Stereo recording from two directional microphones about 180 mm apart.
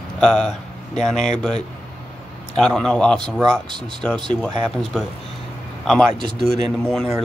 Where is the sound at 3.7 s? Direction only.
25° right (ahead or behind).